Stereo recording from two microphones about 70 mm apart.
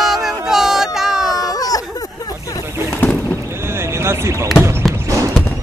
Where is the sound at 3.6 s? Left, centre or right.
Right.